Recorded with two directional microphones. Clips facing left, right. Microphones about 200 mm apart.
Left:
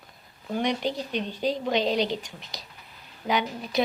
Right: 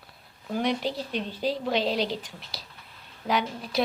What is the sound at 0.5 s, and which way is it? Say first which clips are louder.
A woman's voice: even; centre (ahead or behind).